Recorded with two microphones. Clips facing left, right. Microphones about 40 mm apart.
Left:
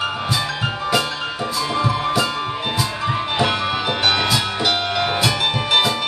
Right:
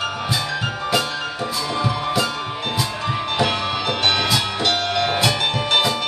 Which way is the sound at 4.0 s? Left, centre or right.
Centre.